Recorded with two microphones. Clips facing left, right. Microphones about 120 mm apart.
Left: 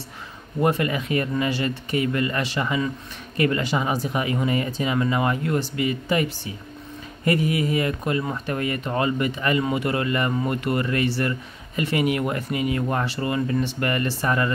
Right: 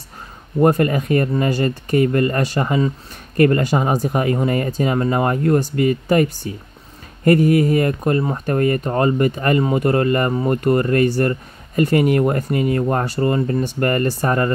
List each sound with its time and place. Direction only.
0.6 s speech: 45° right (ahead or behind)